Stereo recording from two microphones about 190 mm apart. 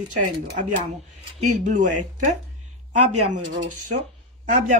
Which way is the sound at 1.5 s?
40° right (ahead or behind).